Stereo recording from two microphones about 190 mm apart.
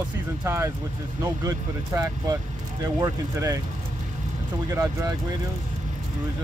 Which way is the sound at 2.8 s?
15° right (ahead or behind).